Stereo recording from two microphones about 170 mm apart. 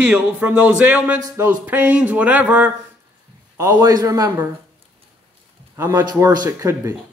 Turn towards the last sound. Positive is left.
turn(degrees=-15)  # may be behind; listen again after turning